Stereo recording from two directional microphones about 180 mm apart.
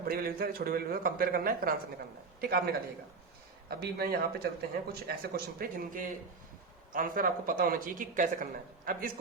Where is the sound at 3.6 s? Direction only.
60° right (ahead or behind).